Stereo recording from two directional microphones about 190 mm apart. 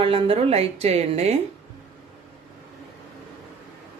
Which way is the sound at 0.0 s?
30° right (ahead or behind).